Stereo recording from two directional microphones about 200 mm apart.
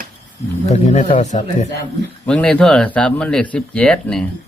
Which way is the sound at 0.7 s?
40° left (ahead or behind).